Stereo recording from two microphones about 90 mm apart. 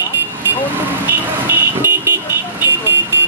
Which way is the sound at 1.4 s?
25° right (ahead or behind).